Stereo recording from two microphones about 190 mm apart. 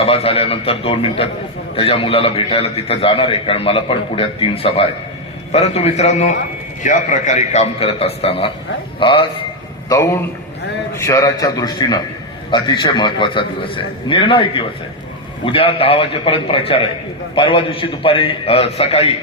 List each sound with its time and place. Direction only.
0.0 s a man's voice: 30° left (ahead or behind)
9.9 s a man's voice: 15° left (ahead or behind); by 19.1 s 30° left (ahead or behind)